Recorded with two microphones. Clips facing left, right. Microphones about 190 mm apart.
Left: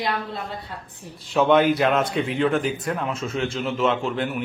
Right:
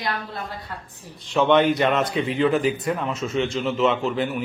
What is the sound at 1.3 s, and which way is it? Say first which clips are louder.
Speech: even; centre (ahead or behind).